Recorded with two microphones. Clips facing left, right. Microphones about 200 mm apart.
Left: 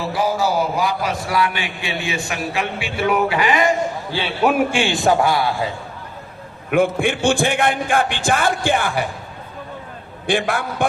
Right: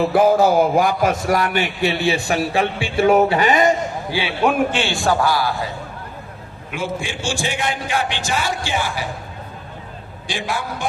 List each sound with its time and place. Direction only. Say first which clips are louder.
0.1 s a man's voice: right 3 dB; 55° right (ahead or behind); by 3.1 s 30° right (ahead or behind)
3.1 s speech: right 3 dB; 40° right (ahead or behind)
4.4 s a man's voice: left 2 dB; 10° left (ahead or behind); by 5.5 s 25° left (ahead or behind)
6.7 s a man's voice: left 9 dB; 55° left (ahead or behind)
10.2 s a man's voice: left 5 dB; 55° left (ahead or behind)